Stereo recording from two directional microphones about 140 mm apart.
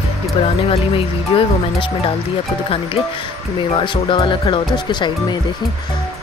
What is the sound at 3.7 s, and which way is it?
Speech, 35° left (ahead or behind).